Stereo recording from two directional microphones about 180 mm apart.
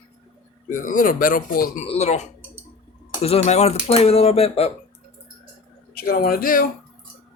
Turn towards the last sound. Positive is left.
turn(degrees=50)  # may be behind; listen again after turning